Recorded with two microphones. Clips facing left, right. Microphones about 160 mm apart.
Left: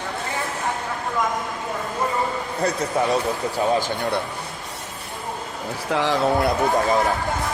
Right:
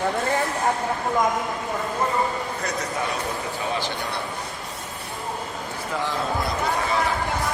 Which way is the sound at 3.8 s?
45° left (ahead or behind).